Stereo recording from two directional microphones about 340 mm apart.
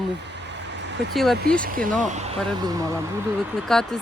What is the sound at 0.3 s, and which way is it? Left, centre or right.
Vehicle, right.